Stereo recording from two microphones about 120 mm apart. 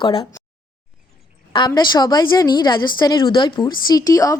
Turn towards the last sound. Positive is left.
turn(degrees=30)  # may be behind; listen again after turning